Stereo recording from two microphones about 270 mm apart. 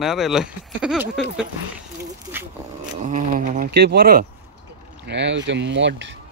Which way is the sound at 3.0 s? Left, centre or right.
Right.